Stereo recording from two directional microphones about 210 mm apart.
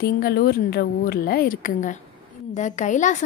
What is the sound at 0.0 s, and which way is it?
A woman's voice, 45° left (ahead or behind).